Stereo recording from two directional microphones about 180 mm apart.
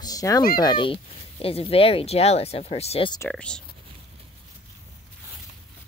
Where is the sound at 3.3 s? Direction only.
5° left (ahead or behind).